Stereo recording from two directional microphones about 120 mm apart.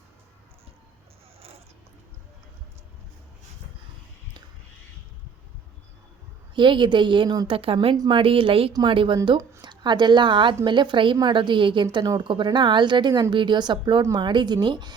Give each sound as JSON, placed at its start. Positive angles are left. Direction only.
{"t": 6.6, "sound": "a woman's voice", "side_deg": -40}